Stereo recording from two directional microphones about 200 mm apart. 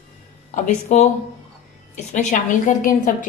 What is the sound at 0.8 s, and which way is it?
A woman's voice, 35° left (ahead or behind).